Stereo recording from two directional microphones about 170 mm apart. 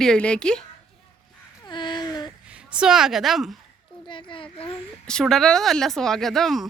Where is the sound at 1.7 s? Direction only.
25° left (ahead or behind).